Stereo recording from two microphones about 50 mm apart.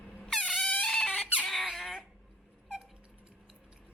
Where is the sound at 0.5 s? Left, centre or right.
Left.